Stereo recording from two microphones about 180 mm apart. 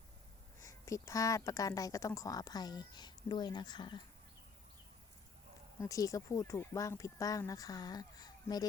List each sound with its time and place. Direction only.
0.6 s a woman's voice: 20° left (ahead or behind)
5.8 s a woman's voice: 20° left (ahead or behind)